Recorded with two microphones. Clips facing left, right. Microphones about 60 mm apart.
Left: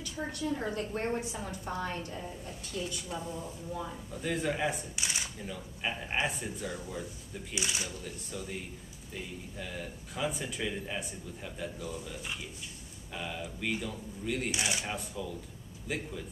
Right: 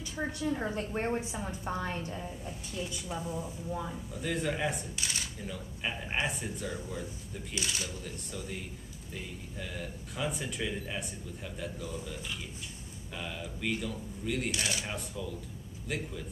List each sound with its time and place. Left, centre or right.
0.5 s a woman's voice: centre
4.1 s speech: centre
4.9 s speech: centre
5.4 s speech: centre
7.5 s speech: centre
8.0 s speech: centre
14.5 s speech: centre
14.9 s speech: centre